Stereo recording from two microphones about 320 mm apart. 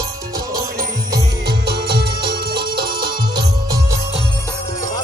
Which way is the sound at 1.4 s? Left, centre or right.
Right.